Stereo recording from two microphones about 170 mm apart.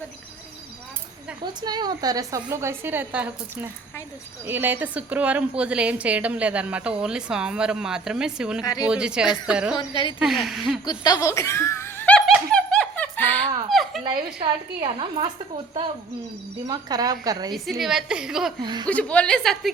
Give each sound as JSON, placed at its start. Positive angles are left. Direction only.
{"t": 1.6, "sound": "a woman's voice", "side_deg": -25}
{"t": 8.6, "sound": "a woman's voice", "side_deg": 20}
{"t": 8.9, "sound": "a woman's voice", "side_deg": -5}
{"t": 9.7, "sound": "a woman's voice", "side_deg": 30}
{"t": 10.2, "sound": "a woman's voice", "side_deg": 0}
{"t": 10.8, "sound": "speech", "side_deg": 25}
{"t": 12.5, "sound": "laughter", "side_deg": 5}
{"t": 13.7, "sound": "a sound", "side_deg": 0}
{"t": 14.8, "sound": "a woman's voice", "side_deg": -30}
{"t": 16.6, "sound": "a woman's voice", "side_deg": -25}
{"t": 17.5, "sound": "a woman's voice", "side_deg": 0}
{"t": 18.6, "sound": "a woman's voice", "side_deg": -25}
{"t": 18.9, "sound": "a woman's voice", "side_deg": 10}